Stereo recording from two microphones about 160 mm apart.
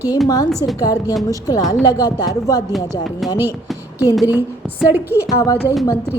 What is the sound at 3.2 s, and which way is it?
Speech, centre (ahead or behind).